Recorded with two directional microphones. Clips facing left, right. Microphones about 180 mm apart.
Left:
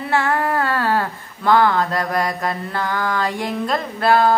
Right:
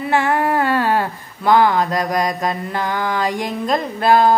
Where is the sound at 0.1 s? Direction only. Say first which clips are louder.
Right 2 dB; 15° right (ahead or behind).